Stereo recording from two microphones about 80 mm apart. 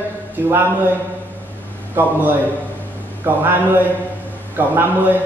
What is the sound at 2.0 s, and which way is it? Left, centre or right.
Speech, right.